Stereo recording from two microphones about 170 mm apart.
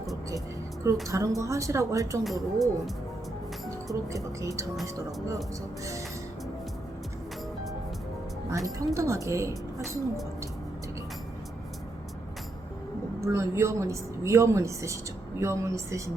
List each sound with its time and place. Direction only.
1.0 s a woman's voice: 20° right (ahead or behind)
2.2 s speech: centre (ahead or behind)
4.1 s speech: 20° right (ahead or behind)
8.4 s a woman's voice: 20° right (ahead or behind)
13.2 s a woman's voice: 15° right (ahead or behind)